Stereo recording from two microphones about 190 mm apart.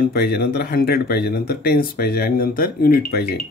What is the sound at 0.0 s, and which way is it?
Speech, 55° left (ahead or behind).